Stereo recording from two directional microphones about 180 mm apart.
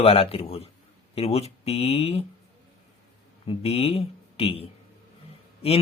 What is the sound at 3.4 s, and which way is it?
Speech, 35° left (ahead or behind).